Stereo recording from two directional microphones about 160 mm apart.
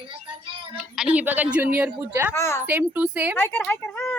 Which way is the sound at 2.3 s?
15° left (ahead or behind).